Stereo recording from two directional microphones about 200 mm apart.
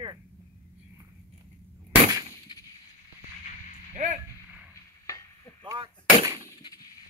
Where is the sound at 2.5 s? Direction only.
20° left (ahead or behind).